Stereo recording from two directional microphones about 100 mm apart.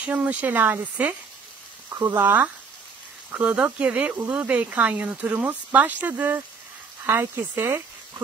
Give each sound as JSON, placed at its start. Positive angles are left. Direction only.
{"t": 0.0, "sound": "speech", "side_deg": -15}
{"t": 1.9, "sound": "speech", "side_deg": -30}
{"t": 2.2, "sound": "speech", "side_deg": -20}